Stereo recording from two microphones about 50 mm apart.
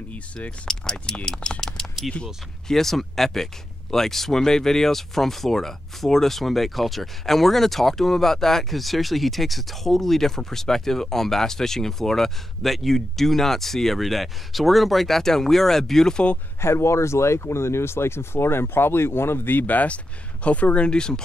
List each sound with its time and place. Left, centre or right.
0.7 s speech: centre
16.6 s speech: left; by 21.2 s centre